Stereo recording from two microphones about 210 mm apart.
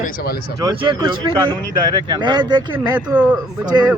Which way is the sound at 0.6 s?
20° right (ahead or behind).